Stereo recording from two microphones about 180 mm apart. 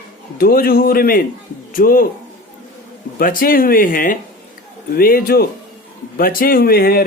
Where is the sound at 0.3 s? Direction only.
55° left (ahead or behind).